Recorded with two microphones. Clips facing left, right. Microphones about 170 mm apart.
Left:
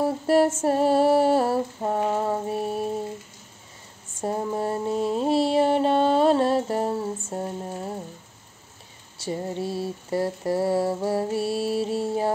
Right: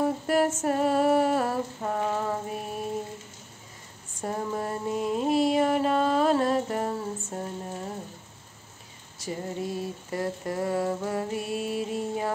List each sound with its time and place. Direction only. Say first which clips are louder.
0.0 s female singing: left 4 dB; 30° left (ahead or behind)
0.6 s mantra: left 4 dB; 30° left (ahead or behind)
4.2 s mantra: left 4 dB; 25° left (ahead or behind)
9.2 s mantra: left 4 dB; 30° left (ahead or behind)